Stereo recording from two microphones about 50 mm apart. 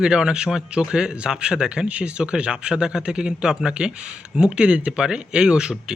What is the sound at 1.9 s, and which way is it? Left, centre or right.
Speech, right.